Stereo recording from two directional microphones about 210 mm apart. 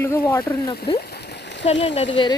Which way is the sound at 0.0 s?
10° left (ahead or behind).